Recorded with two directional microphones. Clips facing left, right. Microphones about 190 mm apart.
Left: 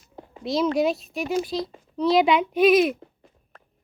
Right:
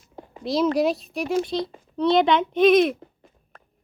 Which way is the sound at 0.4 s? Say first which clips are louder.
Right 1 dB; centre (ahead or behind).